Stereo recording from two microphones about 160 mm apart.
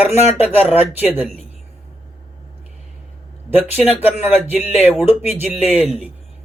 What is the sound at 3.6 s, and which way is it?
Speech, 10° right (ahead or behind).